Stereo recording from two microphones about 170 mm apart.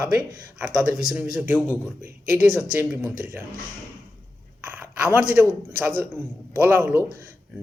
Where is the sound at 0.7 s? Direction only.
25° right (ahead or behind).